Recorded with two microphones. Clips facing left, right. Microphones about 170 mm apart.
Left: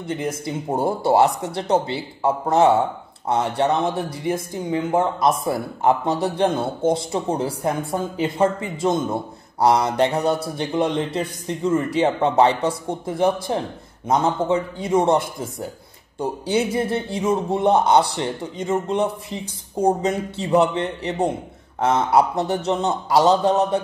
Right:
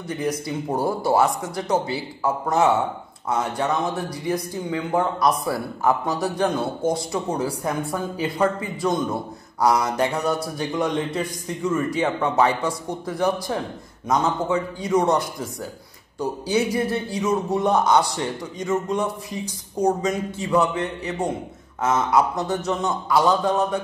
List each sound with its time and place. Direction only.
0.1 s a man's voice: 25° left (ahead or behind)